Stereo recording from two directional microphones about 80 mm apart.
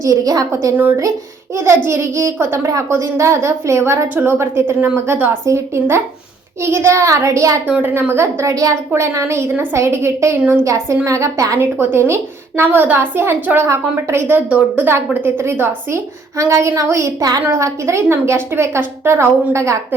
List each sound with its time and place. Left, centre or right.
0.0 s a woman's voice: right
1.5 s a woman's voice: right
4.1 s a woman's voice: right
7.7 s a woman's voice: right
17.6 s a woman's voice: right